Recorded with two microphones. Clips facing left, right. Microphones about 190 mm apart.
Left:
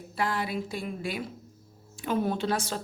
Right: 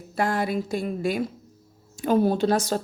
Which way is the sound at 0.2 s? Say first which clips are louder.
Right 5 dB; 45° right (ahead or behind).